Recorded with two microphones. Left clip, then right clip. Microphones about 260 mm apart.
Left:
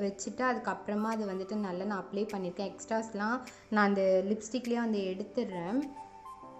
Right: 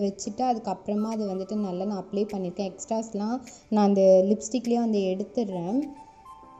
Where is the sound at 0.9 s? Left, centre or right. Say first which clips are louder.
Right 4 dB; centre.